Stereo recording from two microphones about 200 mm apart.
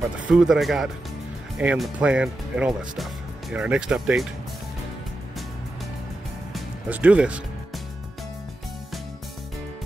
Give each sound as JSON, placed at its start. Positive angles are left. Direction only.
{"t": 0.3, "sound": "speech", "side_deg": 0}
{"t": 6.5, "sound": "music", "side_deg": -5}